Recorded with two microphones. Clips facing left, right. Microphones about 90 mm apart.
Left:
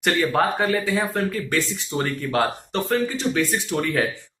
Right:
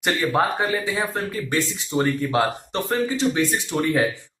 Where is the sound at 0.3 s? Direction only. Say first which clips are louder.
Even; 15° right (ahead or behind).